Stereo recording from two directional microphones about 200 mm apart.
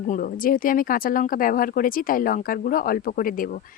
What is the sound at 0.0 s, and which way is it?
Speech, 40° left (ahead or behind).